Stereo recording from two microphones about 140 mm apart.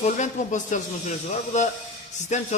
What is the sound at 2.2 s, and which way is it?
Speech, 55° left (ahead or behind).